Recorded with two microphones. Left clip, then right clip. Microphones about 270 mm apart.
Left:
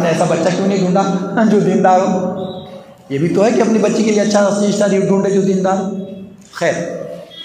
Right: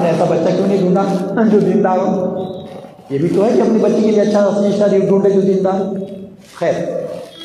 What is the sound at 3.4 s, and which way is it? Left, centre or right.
A man's voice, left.